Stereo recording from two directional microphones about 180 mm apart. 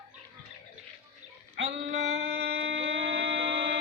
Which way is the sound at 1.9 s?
75° right (ahead or behind).